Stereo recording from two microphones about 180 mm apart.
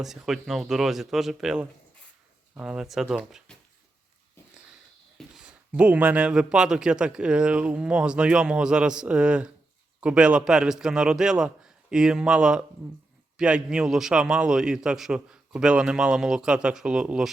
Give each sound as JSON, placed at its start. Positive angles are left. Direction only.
{"t": 0.0, "sound": "speech", "side_deg": 0}
{"t": 5.1, "sound": "speech", "side_deg": -5}